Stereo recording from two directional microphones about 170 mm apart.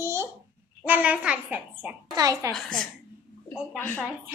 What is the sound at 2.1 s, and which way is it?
Speech, 20° right (ahead or behind).